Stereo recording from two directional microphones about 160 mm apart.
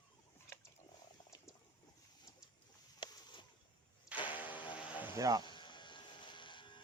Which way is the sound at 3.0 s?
30° left (ahead or behind).